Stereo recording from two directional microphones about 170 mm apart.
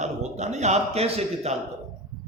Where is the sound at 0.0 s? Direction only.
40° right (ahead or behind).